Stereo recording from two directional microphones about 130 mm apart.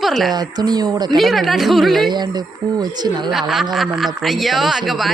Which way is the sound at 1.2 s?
Centre (ahead or behind).